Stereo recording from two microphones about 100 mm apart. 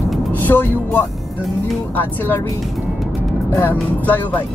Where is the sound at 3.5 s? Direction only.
25° left (ahead or behind).